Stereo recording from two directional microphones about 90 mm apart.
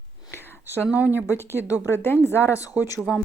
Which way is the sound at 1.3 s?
35° left (ahead or behind).